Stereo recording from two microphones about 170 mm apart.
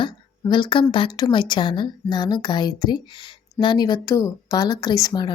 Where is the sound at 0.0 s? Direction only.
25° left (ahead or behind).